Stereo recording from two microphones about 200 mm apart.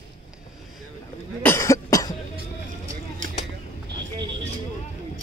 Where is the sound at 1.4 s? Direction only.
15° left (ahead or behind).